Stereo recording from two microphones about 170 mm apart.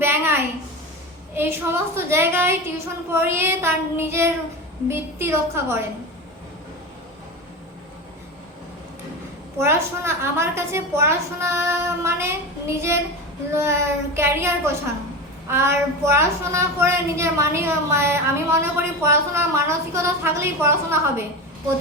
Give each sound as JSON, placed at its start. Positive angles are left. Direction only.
{"t": 0.0, "sound": "a sound", "side_deg": -15}
{"t": 1.3, "sound": "a woman's voice", "side_deg": -15}
{"t": 9.6, "sound": "a woman's voice", "side_deg": -15}